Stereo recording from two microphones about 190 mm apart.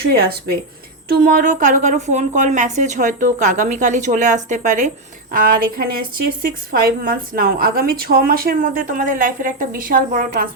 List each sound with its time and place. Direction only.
0.0 s speech: 55° right (ahead or behind)
1.2 s a woman's voice: 45° right (ahead or behind)